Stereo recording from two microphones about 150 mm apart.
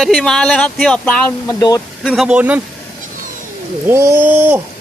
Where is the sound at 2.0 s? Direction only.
5° right (ahead or behind).